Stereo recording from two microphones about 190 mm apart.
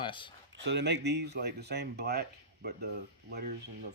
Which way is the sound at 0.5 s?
65° right (ahead or behind).